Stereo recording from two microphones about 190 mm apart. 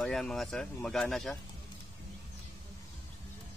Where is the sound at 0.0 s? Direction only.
Centre (ahead or behind).